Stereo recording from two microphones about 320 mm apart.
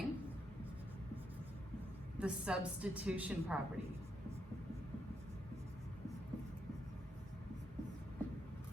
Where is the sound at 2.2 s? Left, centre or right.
Centre.